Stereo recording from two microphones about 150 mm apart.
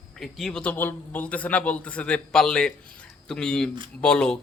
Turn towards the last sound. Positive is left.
turn(degrees=5)  # may be behind; listen again after turning